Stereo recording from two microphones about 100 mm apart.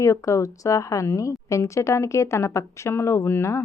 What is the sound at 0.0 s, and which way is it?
A woman's voice, 30° left (ahead or behind).